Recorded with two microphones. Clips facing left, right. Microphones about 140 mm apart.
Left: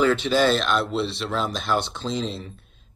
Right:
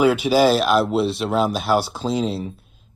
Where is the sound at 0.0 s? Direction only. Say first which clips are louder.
Right 4 dB; 10° right (ahead or behind).